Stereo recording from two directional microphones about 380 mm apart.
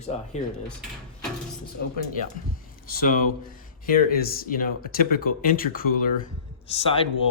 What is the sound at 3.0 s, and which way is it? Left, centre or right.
Speech, left.